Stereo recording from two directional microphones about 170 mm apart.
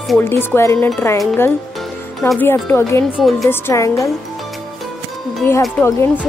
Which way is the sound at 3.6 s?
15° left (ahead or behind).